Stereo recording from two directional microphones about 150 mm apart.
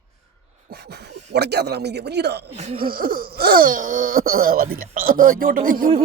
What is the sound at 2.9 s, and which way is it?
Speech, 75° right (ahead or behind).